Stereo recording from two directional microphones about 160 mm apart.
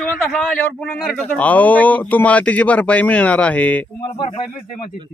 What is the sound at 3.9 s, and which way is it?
Speech, 30° left (ahead or behind).